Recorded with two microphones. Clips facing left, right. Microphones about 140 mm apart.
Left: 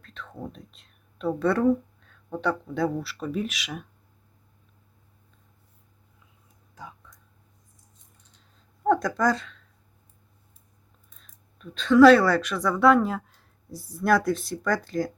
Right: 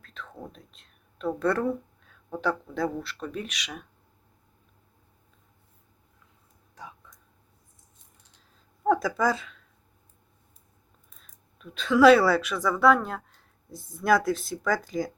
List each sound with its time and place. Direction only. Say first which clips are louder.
0.0 s speech: left 3 dB; centre (ahead or behind)
6.7 s a sound: left 1 dB; centre (ahead or behind)
8.8 s speech: left 1 dB; 5° right (ahead or behind)
11.1 s speech: even; 5° right (ahead or behind)